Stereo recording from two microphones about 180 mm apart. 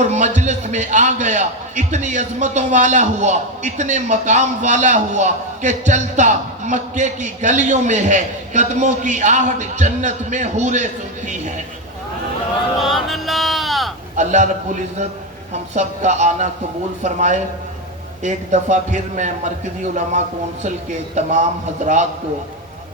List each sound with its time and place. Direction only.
0.0 s a man's voice: 40° right (ahead or behind)
12.8 s speech: centre (ahead or behind)
14.2 s a man's voice: 40° right (ahead or behind)
15.7 s a man's voice: 40° right (ahead or behind)